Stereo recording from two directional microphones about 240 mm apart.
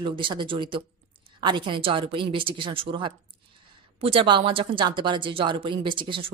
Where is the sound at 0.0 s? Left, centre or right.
Centre.